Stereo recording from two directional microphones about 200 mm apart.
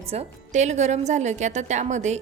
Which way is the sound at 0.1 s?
35° right (ahead or behind).